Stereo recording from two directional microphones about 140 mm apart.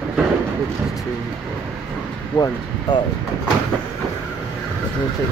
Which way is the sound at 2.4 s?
30° left (ahead or behind).